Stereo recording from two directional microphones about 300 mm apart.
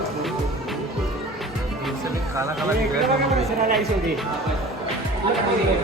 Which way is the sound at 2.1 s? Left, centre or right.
Centre.